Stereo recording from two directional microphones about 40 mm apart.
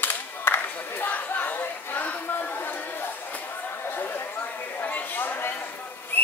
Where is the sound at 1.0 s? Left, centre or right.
Left.